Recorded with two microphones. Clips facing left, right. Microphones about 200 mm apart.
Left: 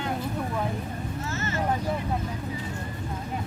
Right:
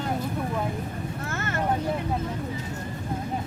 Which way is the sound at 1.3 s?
55° right (ahead or behind).